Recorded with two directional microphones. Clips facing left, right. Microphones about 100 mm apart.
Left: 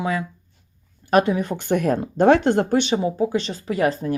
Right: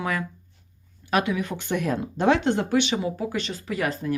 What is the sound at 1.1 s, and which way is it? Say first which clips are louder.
Speech: left 6 dB; 40° left (ahead or behind).